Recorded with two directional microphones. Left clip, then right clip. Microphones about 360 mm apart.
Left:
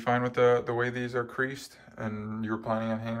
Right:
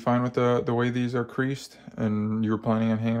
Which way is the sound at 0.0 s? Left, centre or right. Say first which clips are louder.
Even; centre.